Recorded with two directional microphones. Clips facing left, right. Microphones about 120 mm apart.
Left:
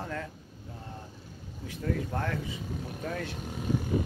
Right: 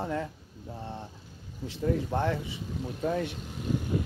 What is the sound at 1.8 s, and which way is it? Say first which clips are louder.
Speech: right 4 dB; 25° right (ahead or behind).